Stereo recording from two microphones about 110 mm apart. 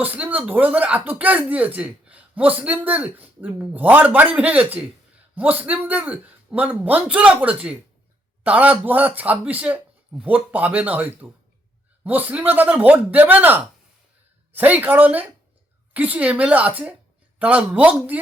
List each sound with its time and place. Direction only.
0.0 s speech: 15° right (ahead or behind)